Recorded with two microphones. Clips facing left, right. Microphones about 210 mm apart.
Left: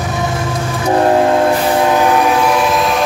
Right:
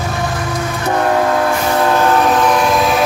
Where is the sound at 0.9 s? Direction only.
30° left (ahead or behind).